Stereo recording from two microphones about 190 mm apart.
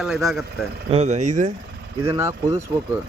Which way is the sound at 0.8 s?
35° right (ahead or behind).